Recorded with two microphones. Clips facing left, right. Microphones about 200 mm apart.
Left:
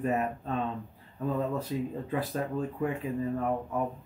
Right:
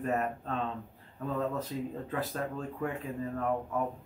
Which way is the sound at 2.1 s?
15° left (ahead or behind).